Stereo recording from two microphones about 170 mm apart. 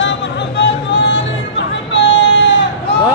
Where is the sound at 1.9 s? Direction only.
90° left.